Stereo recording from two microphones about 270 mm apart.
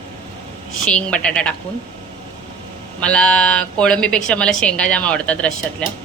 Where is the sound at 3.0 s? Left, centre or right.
Centre.